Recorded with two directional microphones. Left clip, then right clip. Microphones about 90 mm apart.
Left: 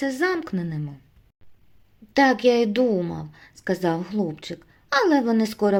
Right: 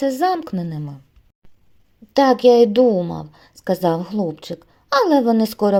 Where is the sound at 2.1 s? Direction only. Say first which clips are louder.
Right 6 dB; 40° right (ahead or behind).